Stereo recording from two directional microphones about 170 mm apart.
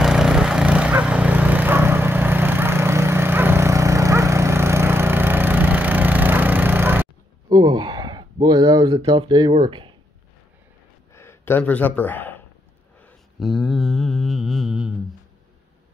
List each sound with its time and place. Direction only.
0.0 s a sound: 5° right (ahead or behind)
7.4 s speech: 25° right (ahead or behind)
11.1 s speech: 15° left (ahead or behind)
13.0 s mantra: centre (ahead or behind)